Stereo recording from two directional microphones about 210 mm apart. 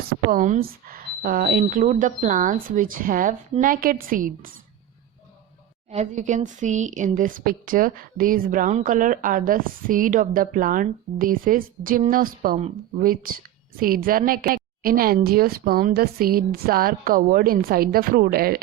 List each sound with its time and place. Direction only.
0.1 s speech: 40° right (ahead or behind)
5.9 s a woman's voice: 35° right (ahead or behind)